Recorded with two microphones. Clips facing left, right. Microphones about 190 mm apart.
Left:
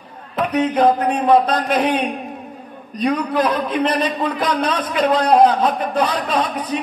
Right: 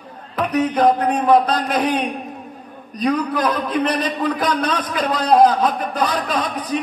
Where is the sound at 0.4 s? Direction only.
25° left (ahead or behind).